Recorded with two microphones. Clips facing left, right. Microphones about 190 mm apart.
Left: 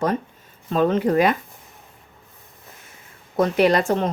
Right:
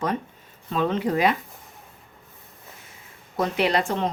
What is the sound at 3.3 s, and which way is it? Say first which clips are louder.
Speech: left 5 dB; 45° left (ahead or behind).